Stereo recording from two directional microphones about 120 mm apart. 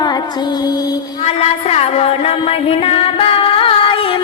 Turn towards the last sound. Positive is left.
turn(degrees=50)  # may be behind; listen again after turning